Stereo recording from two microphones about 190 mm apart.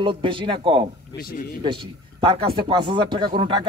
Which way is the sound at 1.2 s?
50° left (ahead or behind).